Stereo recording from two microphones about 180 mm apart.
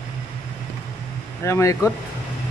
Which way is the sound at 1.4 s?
15° left (ahead or behind).